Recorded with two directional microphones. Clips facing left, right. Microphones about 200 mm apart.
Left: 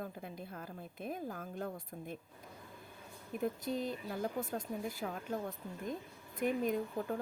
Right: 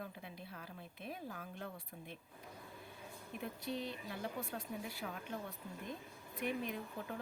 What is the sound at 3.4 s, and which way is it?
Speech, 45° left (ahead or behind).